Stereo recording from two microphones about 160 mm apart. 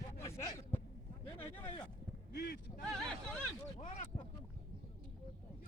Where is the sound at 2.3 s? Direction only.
80° left.